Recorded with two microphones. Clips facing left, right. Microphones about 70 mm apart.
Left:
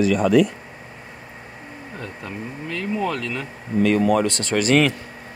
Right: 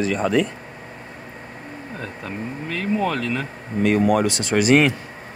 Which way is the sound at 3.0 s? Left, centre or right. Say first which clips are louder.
Right 2 dB; right.